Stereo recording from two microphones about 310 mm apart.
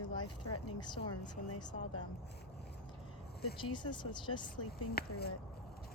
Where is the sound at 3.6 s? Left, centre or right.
Centre.